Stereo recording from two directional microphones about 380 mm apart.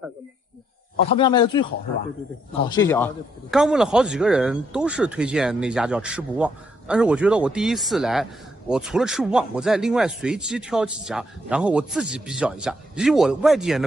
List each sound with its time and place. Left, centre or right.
1.1 s speech: centre
2.7 s speech: centre